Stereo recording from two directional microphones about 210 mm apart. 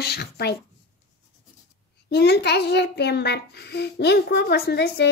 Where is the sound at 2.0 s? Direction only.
50° left (ahead or behind).